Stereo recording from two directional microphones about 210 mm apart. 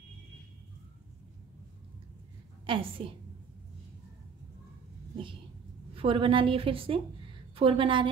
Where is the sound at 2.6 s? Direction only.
25° right (ahead or behind).